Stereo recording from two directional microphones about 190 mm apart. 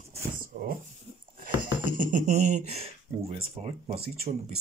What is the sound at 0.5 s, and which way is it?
Speech, 40° right (ahead or behind).